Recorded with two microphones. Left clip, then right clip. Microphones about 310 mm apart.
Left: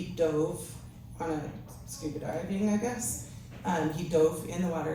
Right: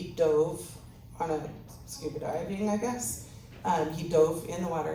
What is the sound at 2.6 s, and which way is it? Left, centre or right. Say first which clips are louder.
A woman's voice: right 1 dB; centre.